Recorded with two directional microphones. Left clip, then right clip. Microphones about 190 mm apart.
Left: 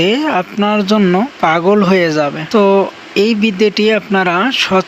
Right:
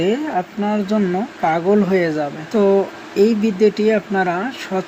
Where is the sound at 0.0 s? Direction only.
35° left (ahead or behind).